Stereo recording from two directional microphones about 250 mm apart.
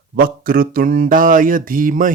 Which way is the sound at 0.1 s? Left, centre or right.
Right.